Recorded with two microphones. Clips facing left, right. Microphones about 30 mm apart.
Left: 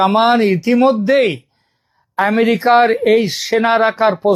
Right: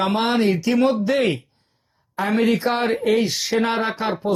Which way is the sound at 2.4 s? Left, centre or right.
Left.